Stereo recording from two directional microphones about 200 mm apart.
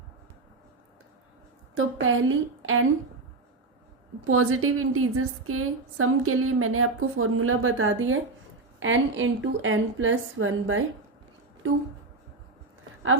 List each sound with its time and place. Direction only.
1.7 s a woman's voice: 85° right
4.2 s a woman's voice: 90° right